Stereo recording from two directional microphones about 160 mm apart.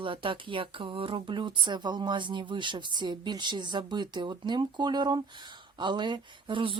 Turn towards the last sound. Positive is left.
turn(degrees=-30)  # may be behind; listen again after turning